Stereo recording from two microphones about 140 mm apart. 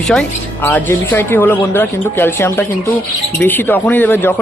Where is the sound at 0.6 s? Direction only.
15° left (ahead or behind).